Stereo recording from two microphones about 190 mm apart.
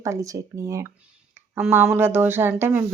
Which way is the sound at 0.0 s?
15° right (ahead or behind).